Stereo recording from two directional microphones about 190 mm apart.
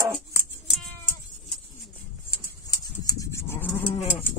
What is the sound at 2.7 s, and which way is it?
Livestock, 20° left (ahead or behind).